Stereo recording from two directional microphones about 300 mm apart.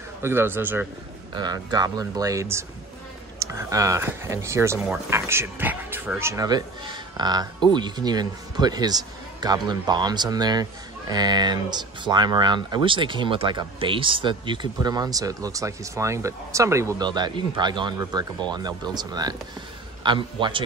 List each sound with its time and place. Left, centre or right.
0.2 s speech: centre